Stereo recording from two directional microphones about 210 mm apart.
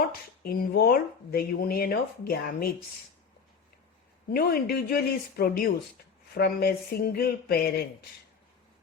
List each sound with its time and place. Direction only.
0.4 s speech: 45° left (ahead or behind)
4.4 s speech: 45° left (ahead or behind)